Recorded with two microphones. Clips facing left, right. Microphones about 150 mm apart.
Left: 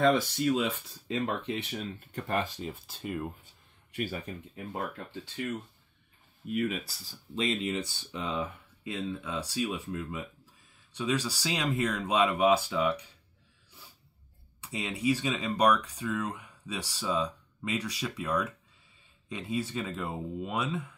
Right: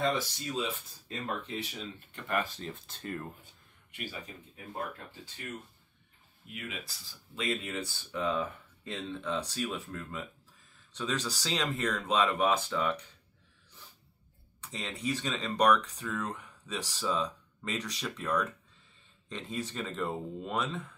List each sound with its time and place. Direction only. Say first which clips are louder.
0.0 s speech: left 7 dB; 60° left (ahead or behind)
2.1 s speech: left 2 dB; 30° left (ahead or behind)
2.4 s speech: left 3 dB; 10° left (ahead or behind)
6.5 s speech: left 12 dB; 45° left (ahead or behind)
7.3 s speech: left 4 dB; 20° left (ahead or behind)
14.6 s speech: left 5 dB; 10° left (ahead or behind)